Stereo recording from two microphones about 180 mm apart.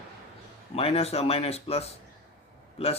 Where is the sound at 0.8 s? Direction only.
35° left (ahead or behind).